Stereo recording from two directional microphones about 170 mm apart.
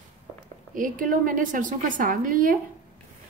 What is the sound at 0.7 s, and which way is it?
A woman's voice, 50° right (ahead or behind).